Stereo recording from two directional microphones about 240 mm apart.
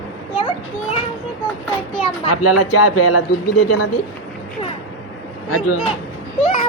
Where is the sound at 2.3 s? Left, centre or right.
Left.